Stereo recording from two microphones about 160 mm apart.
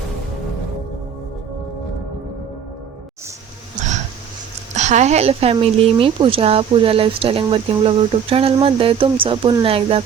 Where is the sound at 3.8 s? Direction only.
50° right (ahead or behind).